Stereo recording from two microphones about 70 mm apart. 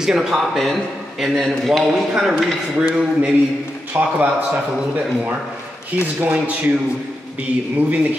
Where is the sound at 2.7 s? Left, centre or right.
Centre.